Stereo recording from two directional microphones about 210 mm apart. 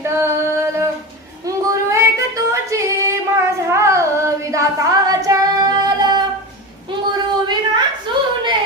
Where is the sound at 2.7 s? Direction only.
15° right (ahead or behind).